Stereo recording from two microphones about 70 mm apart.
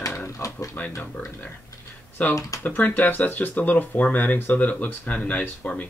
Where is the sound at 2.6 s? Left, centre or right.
Left.